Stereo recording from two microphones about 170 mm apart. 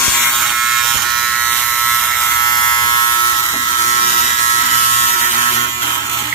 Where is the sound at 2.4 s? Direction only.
25° left (ahead or behind).